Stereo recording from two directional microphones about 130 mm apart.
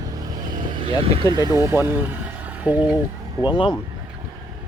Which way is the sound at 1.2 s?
30° right (ahead or behind).